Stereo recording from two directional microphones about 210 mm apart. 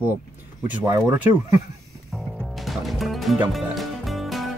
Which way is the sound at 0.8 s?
15° right (ahead or behind).